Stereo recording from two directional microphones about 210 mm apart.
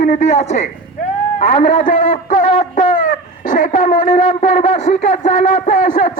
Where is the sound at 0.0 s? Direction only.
35° left (ahead or behind).